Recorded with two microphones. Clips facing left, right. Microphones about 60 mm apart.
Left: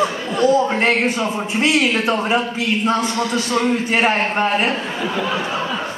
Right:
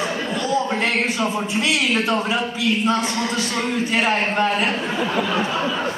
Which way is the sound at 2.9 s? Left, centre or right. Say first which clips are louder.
Left 3 dB; left.